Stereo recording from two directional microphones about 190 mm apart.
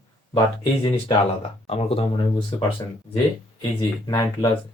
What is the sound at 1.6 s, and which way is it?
Speech, 30° left (ahead or behind).